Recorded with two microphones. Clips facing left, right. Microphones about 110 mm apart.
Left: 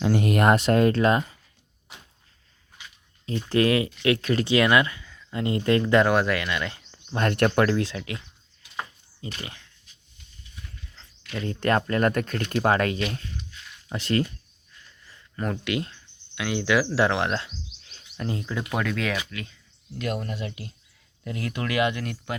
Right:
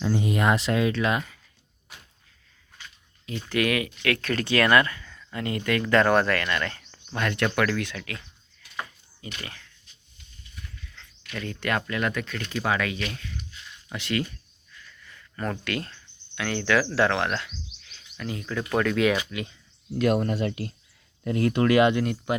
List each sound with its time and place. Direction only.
0.0 s speech: 65° left (ahead or behind); by 1.2 s 40° left (ahead or behind)
3.5 s speech: 30° left (ahead or behind); by 5.2 s 10° left (ahead or behind)
5.3 s speech: 25° left (ahead or behind)
7.2 s speech: 40° left (ahead or behind); by 8.2 s 20° left (ahead or behind)
9.4 s speech: 20° left (ahead or behind)
10.9 s speech: 30° left (ahead or behind)
14.8 s a sound: 30° left (ahead or behind)
15.4 s speech: 15° left (ahead or behind); by 18.4 s 30° left (ahead or behind)
18.4 s speech: 10° left (ahead or behind)
19.1 s speech: 20° right (ahead or behind)
20.0 s speech: 50° right (ahead or behind)
21.2 s speech: 40° right (ahead or behind); by 22.4 s 20° right (ahead or behind)